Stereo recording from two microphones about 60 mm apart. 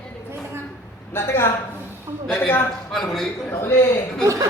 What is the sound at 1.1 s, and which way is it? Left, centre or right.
Speech, left.